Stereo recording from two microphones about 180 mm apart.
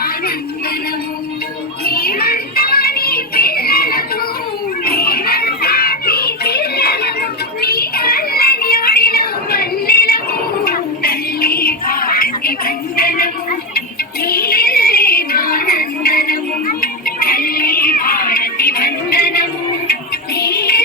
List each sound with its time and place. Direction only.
1.8 s music: 55° left (ahead or behind)